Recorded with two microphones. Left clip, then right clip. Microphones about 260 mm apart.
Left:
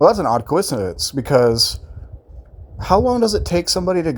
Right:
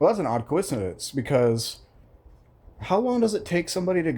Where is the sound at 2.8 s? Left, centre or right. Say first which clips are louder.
Left 8 dB; centre.